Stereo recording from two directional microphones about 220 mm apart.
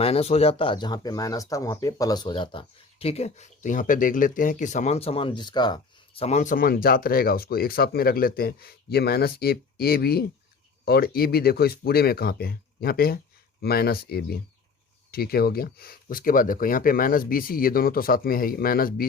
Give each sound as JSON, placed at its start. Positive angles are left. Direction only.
{"t": 0.0, "sound": "speech", "side_deg": 25}